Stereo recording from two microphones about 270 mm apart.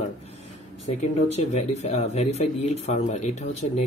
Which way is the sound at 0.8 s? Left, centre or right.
Left.